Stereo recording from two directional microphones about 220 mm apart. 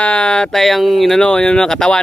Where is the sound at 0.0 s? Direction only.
5° left (ahead or behind).